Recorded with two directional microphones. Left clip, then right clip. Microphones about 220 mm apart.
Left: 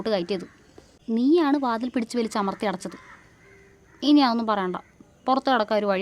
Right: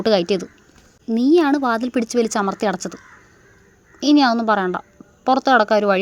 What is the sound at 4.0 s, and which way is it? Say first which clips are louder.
A woman's voice: right 5 dB; 15° right (ahead or behind).